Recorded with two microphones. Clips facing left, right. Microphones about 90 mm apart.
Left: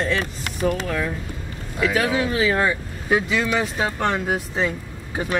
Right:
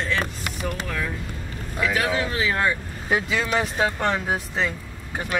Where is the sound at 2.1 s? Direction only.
15° left (ahead or behind).